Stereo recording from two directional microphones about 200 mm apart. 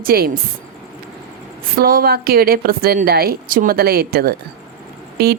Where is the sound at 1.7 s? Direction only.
50° right (ahead or behind).